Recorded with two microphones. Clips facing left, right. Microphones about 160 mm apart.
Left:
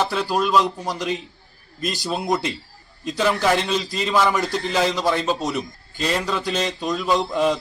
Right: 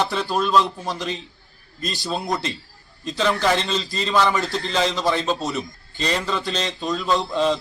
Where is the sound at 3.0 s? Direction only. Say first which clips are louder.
Left 1 dB; 10° left (ahead or behind).